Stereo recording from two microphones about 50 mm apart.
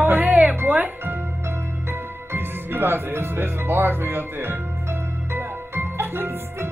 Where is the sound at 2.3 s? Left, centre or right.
Right.